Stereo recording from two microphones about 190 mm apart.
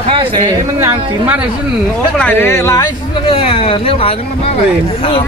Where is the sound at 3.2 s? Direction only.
30° left (ahead or behind).